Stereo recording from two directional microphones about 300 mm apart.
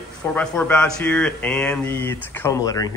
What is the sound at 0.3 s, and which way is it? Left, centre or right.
Speech, centre.